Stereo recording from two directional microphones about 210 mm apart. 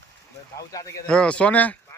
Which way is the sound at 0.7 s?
15° left (ahead or behind).